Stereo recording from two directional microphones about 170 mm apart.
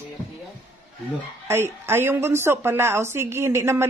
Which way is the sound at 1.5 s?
15° right (ahead or behind).